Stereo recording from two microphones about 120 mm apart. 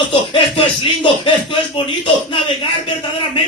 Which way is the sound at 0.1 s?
40° left (ahead or behind).